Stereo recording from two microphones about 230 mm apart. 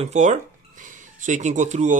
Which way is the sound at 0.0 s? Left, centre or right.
Right.